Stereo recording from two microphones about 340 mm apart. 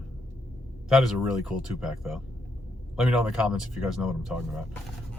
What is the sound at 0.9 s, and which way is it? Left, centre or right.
Speech, centre.